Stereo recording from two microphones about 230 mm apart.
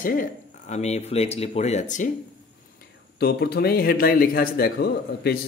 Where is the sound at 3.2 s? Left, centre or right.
Left.